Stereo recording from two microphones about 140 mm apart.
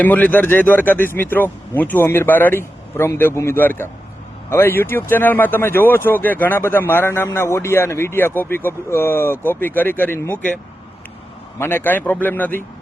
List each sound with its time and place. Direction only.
0.0 s speech: 10° left (ahead or behind)
11.6 s speech: 15° left (ahead or behind)